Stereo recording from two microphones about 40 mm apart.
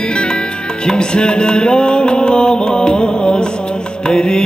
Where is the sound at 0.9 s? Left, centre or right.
Centre.